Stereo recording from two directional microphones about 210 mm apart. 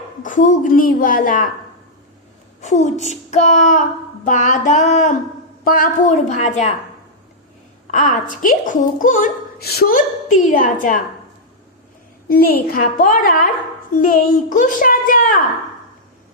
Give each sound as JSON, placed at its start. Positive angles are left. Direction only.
{"t": 0.2, "sound": "a woman's voice", "side_deg": 35}
{"t": 2.6, "sound": "a woman's voice", "side_deg": 35}
{"t": 7.9, "sound": "a woman's voice", "side_deg": 35}
{"t": 12.3, "sound": "a woman's voice", "side_deg": 45}